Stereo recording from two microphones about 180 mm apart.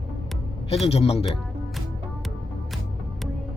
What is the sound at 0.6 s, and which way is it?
Speech, 35° left (ahead or behind).